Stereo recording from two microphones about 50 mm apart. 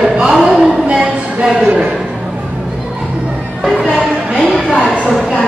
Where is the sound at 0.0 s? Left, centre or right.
Centre.